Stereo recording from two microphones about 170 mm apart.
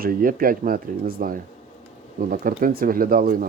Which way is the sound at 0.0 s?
55° right (ahead or behind).